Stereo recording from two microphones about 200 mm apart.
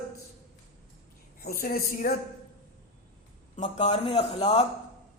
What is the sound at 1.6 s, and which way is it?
Speech, 50° left (ahead or behind).